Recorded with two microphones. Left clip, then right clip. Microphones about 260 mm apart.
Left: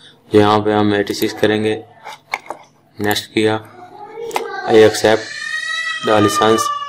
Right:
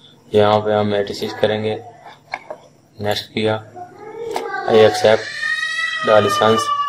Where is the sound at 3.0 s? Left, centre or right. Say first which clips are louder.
Left 3 dB; left.